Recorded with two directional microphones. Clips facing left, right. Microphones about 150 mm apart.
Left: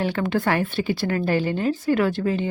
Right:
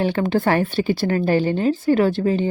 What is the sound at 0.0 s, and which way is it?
A woman's voice, 30° right (ahead or behind).